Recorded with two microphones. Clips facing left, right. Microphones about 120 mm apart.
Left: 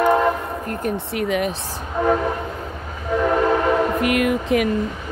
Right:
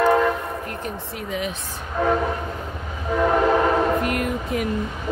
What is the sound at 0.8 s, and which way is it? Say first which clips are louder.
Speech: left 8 dB; 70° left (ahead or behind).